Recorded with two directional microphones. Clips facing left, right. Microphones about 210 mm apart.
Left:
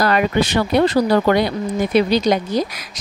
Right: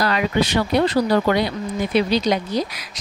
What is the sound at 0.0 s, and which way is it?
Speech, 50° left (ahead or behind).